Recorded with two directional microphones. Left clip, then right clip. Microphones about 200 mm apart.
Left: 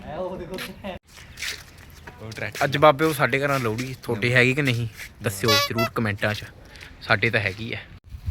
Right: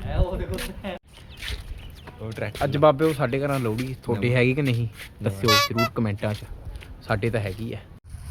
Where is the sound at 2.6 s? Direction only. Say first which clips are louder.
Left 2 dB; centre (ahead or behind).